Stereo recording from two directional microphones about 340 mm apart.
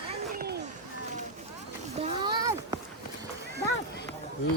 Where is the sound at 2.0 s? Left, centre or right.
Centre.